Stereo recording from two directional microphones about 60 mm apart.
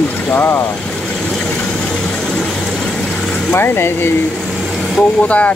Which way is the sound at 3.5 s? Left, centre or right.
Left.